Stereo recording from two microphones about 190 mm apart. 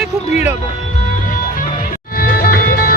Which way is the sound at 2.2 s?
50° left (ahead or behind).